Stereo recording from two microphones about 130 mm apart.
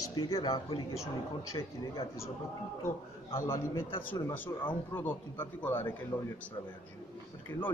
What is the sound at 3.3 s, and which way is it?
A man's voice, 20° left (ahead or behind).